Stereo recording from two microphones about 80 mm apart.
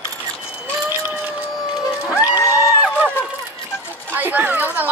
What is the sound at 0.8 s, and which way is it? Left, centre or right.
Run, right.